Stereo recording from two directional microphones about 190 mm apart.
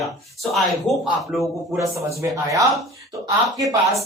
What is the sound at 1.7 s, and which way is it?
Speech, 15° right (ahead or behind).